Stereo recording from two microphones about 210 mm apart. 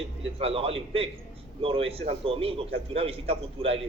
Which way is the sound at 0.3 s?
30° right (ahead or behind).